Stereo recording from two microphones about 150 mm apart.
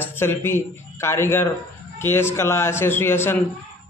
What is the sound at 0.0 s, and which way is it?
A man's voice, 15° left (ahead or behind).